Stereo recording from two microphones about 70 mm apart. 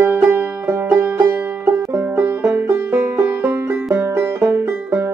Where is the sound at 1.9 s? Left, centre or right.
Right.